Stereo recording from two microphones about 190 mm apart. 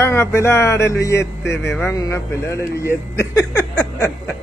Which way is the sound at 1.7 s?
15° left (ahead or behind).